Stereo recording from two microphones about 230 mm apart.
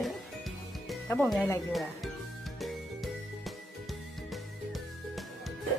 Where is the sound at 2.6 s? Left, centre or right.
Centre.